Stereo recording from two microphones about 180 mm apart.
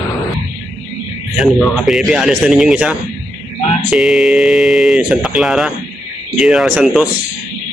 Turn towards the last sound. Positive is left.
turn(degrees=-5)  # may be behind; listen again after turning